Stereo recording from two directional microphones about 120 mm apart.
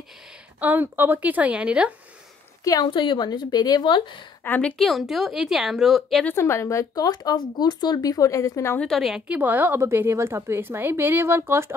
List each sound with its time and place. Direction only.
0.6 s a woman's voice: 15° right (ahead or behind)
2.6 s a woman's voice: 30° left (ahead or behind)
2.9 s speech: 40° left (ahead or behind)
4.5 s a woman's voice: 10° left (ahead or behind)
6.2 s speech: 20° left (ahead or behind)
8.7 s a woman's voice: 5° left (ahead or behind)
9.3 s a woman's voice: 15° right (ahead or behind)